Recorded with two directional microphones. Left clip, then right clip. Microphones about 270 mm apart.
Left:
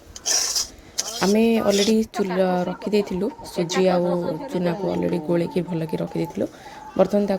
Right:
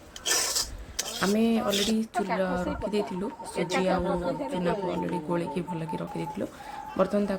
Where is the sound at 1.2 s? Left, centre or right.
Centre.